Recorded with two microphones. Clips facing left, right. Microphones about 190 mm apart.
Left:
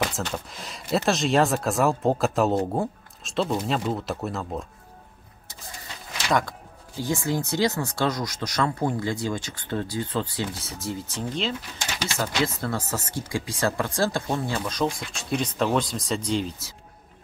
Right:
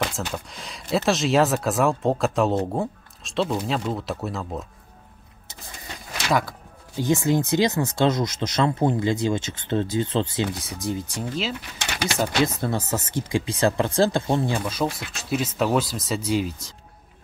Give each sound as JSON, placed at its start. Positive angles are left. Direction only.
{"t": 0.3, "sound": "speech", "side_deg": 0}
{"t": 7.0, "sound": "speech", "side_deg": -20}
{"t": 11.2, "sound": "speech", "side_deg": -5}
{"t": 11.8, "sound": "speech", "side_deg": -65}
{"t": 12.5, "sound": "speech", "side_deg": -20}
{"t": 14.7, "sound": "speech", "side_deg": -5}